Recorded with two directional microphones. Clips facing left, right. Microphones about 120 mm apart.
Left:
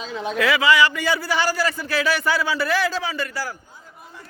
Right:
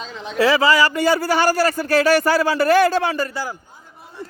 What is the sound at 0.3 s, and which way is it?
A man's voice, 35° right (ahead or behind).